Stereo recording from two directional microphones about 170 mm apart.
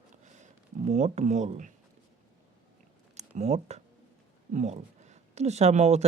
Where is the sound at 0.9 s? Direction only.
40° right (ahead or behind).